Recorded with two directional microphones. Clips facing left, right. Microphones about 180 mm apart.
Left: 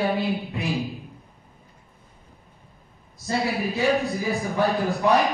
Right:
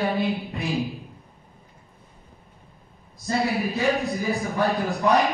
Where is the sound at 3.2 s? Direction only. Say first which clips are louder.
Right 1 dB; centre (ahead or behind).